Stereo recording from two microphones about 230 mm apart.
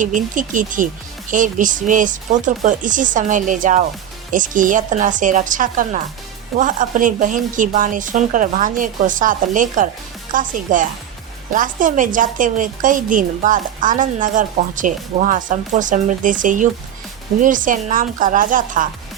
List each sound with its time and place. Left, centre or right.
0.0 s a woman's voice: right